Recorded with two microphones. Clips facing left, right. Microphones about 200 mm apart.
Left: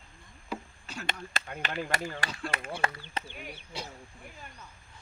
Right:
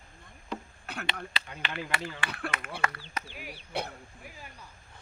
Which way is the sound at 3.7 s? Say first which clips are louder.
Right 7 dB; 60° right (ahead or behind).